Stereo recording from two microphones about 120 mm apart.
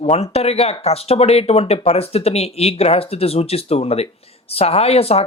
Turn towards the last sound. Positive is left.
turn(degrees=55)  # may be behind; listen again after turning